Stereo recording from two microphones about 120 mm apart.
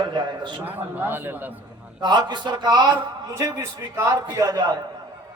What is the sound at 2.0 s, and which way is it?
A man's voice, 35° right (ahead or behind).